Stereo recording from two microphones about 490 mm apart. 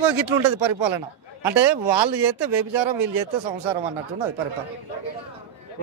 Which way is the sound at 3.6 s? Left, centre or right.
Right.